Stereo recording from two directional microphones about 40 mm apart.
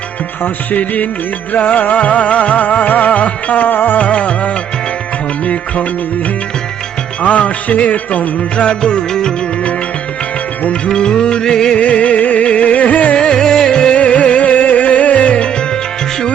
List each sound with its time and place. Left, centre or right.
0.4 s music: left
3.9 s music: left
7.2 s music: left
8.6 s music: left
10.8 s music: centre
11.8 s music: left
13.1 s music: centre
14.0 s music: left